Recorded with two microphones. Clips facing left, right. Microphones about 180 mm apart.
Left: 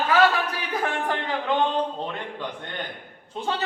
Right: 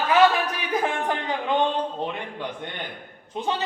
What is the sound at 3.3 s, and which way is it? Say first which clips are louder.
Speech: right 2 dB; 15° right (ahead or behind).